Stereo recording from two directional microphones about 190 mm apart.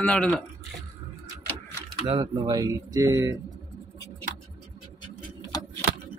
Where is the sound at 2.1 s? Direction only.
25° right (ahead or behind).